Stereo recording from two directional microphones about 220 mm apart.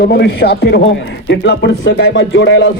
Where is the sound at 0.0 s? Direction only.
45° left (ahead or behind).